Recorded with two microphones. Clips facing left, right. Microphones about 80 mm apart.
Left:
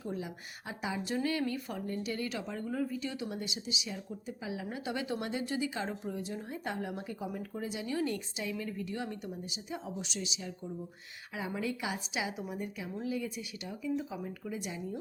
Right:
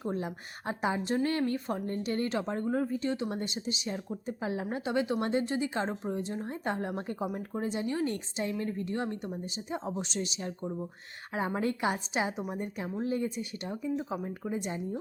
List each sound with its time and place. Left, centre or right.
0.0 s a woman's voice: right
1.5 s speech: right
1.9 s a woman's voice: right
4.9 s speech: right
5.2 s a woman's voice: right
7.3 s a woman's voice: right